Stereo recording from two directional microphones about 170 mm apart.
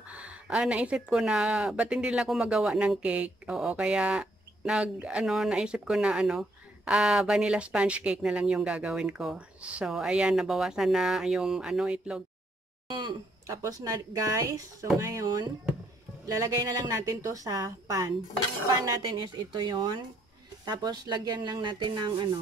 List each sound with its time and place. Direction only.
0.1 s speech: 5° right (ahead or behind)
12.9 s speech: 20° right (ahead or behind)